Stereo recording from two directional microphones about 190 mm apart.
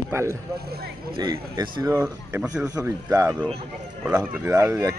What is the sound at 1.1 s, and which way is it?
Speech, 20° right (ahead or behind).